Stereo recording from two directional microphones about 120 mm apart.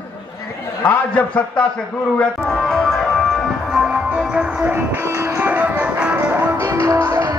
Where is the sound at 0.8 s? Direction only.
15° left (ahead or behind).